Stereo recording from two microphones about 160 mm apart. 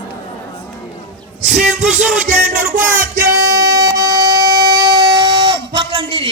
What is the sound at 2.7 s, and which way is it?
Music, 15° right (ahead or behind).